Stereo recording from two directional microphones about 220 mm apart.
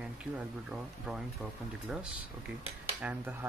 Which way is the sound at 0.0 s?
5° right (ahead or behind).